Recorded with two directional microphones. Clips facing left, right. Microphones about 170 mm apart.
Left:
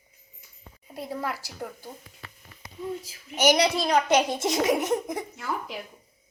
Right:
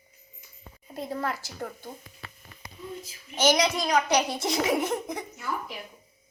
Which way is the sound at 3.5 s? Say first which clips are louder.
Left 2 dB; 30° left (ahead or behind).